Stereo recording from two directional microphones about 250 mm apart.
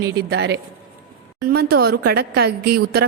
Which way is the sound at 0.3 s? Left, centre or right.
Right.